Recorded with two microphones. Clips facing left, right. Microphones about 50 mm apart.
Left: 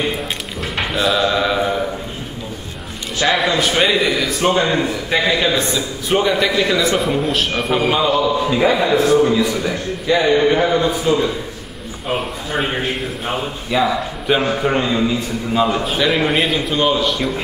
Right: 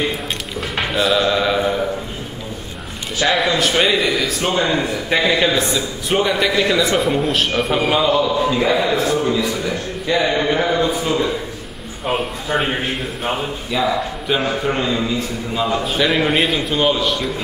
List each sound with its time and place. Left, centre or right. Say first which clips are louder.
0.7 s a sound: even; centre
3.2 s a man's voice: left 1 dB; centre
5.5 s a man's voice: even; centre
13.7 s a man's voice: left 2 dB; centre
15.8 s a man's voice: even; centre